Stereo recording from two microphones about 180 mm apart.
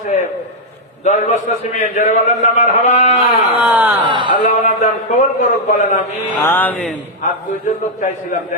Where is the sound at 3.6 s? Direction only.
10° right (ahead or behind).